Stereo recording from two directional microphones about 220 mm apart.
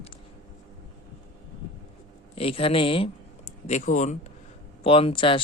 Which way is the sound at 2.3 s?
25° left (ahead or behind).